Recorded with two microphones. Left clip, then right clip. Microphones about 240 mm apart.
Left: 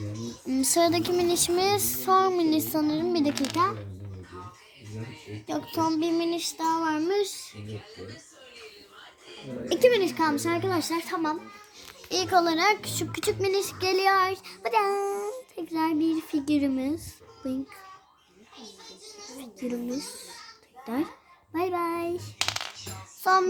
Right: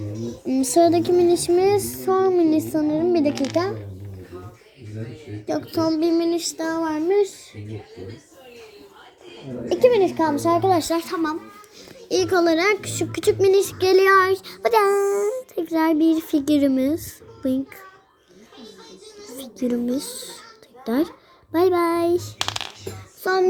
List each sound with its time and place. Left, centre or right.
0.4 s child singing: centre
3.3 s a child's voice: left
5.5 s child singing: centre
9.6 s child singing: centre
10.7 s a child's voice: centre
12.0 s a child's voice: centre
19.6 s child singing: centre
20.8 s a child's voice: centre
21.5 s child singing: centre
23.2 s child singing: centre